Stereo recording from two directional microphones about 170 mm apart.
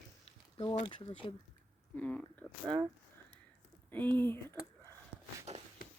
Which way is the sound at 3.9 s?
10° left (ahead or behind).